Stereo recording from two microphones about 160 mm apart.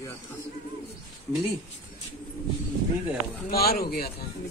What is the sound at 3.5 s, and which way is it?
Speech, 75° left (ahead or behind).